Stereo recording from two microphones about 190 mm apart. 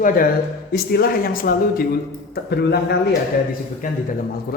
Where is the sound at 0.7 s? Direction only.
55° left (ahead or behind).